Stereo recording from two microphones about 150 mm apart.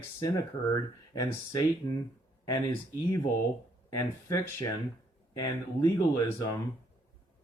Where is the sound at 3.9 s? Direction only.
20° left (ahead or behind).